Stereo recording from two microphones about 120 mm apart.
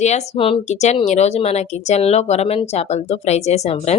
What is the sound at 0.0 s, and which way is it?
Speech, 70° left (ahead or behind).